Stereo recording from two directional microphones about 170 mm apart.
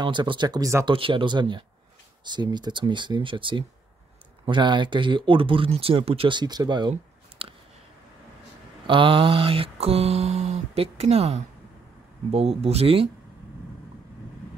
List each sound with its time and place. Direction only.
0.0 s speech: 25° right (ahead or behind)
0.9 s speech: 30° right (ahead or behind)
8.8 s mantra: 30° right (ahead or behind)